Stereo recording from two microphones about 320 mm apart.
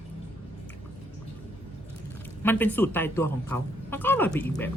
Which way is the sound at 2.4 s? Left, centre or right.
Centre.